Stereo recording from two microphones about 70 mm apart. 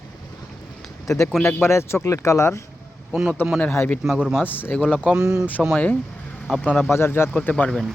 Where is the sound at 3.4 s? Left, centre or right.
Left.